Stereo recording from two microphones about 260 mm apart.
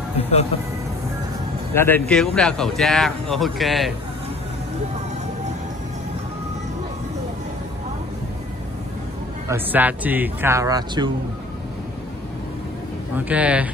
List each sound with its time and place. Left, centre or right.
0.2 s speech: left
1.7 s speech: centre
9.5 s speech: centre
13.1 s speech: centre